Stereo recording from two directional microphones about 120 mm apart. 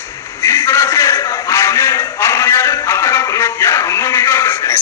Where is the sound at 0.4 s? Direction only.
20° left (ahead or behind).